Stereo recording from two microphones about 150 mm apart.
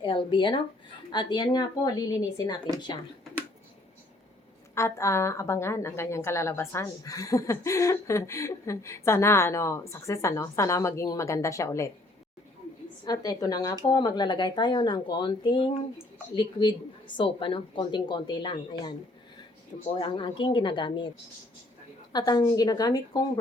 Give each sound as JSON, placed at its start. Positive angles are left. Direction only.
{"t": 0.0, "sound": "a woman's voice", "side_deg": 35}
{"t": 4.7, "sound": "a woman's voice", "side_deg": 20}
{"t": 13.1, "sound": "a woman's voice", "side_deg": 25}
{"t": 22.1, "sound": "a woman's voice", "side_deg": 25}